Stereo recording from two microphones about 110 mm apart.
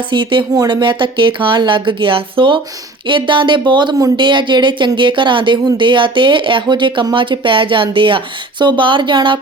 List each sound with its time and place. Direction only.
0.1 s speech: 45° right (ahead or behind)